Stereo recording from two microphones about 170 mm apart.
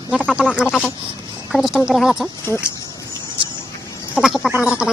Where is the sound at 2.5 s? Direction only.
15° left (ahead or behind).